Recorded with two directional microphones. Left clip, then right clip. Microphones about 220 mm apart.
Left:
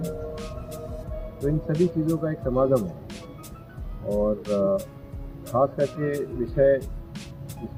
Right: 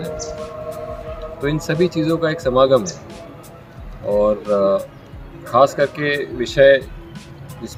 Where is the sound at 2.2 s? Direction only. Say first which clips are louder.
Right 11 dB; 30° right (ahead or behind).